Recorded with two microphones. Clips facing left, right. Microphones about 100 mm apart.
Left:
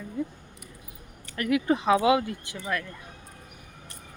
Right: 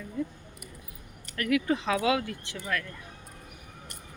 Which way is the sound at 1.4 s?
25° left (ahead or behind).